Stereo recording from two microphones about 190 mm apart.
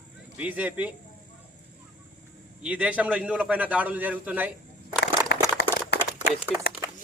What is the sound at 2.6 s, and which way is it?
A man's voice, 5° right (ahead or behind).